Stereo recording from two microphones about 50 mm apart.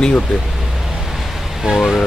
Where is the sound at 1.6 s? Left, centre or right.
Centre.